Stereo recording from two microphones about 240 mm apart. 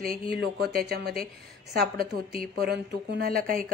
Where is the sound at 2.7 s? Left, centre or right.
Right.